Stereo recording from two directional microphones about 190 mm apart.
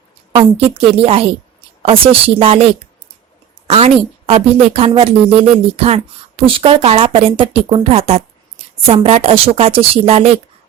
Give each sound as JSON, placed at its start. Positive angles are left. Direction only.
{"t": 0.3, "sound": "a woman's voice", "side_deg": -30}
{"t": 3.7, "sound": "a woman's voice", "side_deg": -30}